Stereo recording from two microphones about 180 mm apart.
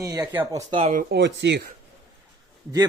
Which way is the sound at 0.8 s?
40° right (ahead or behind).